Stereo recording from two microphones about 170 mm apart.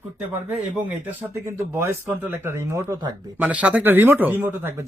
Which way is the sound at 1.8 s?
15° right (ahead or behind).